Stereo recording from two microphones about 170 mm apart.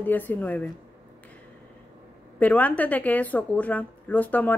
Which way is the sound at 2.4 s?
10° left (ahead or behind).